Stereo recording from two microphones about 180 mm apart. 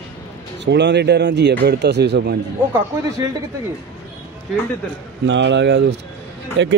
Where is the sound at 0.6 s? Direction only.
75° right (ahead or behind).